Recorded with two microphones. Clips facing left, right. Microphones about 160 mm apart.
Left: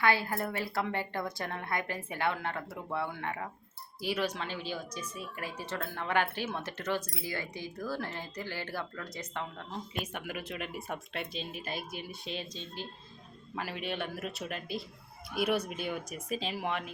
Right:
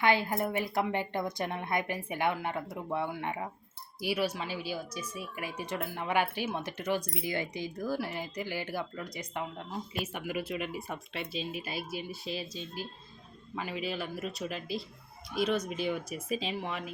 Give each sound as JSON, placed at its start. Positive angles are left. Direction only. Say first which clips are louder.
{"t": 0.0, "sound": "speech", "louder": "right 2 dB", "side_deg": -20}